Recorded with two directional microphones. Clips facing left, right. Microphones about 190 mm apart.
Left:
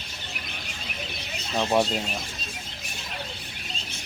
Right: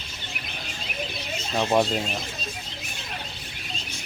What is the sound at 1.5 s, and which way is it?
Speech, centre (ahead or behind).